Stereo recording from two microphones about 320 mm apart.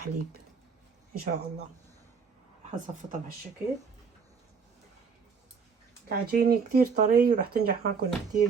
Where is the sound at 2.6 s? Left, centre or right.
Right.